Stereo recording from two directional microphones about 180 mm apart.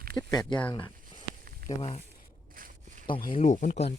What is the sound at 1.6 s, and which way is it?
Speech, 55° right (ahead or behind).